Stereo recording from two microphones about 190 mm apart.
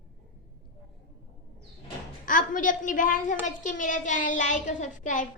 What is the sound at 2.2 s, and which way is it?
A woman's voice, 45° left (ahead or behind).